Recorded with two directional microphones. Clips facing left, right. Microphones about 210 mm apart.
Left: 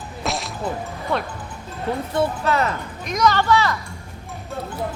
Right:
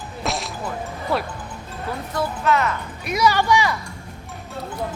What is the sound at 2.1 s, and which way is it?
Speech, 30° left (ahead or behind).